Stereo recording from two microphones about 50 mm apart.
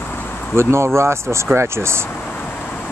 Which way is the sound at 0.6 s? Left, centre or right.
Right.